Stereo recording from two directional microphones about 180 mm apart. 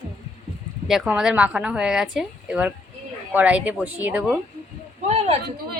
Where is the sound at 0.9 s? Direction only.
5° right (ahead or behind).